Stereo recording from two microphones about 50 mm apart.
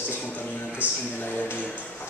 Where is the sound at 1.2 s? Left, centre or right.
Left.